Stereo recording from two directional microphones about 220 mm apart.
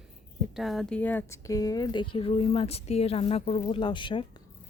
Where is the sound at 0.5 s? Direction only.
Centre (ahead or behind); by 4.3 s 20° left (ahead or behind).